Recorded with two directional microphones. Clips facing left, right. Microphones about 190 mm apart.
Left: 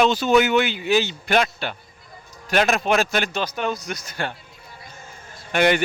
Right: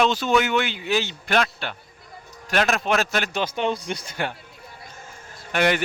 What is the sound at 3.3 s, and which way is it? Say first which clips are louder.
Speech: right 1 dB; 25° right (ahead or behind).